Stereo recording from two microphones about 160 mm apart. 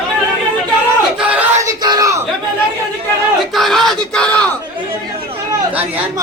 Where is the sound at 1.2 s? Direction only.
10° right (ahead or behind).